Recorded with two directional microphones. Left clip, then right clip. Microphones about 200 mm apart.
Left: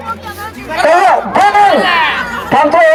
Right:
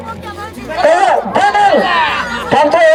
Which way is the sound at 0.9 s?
35° right (ahead or behind).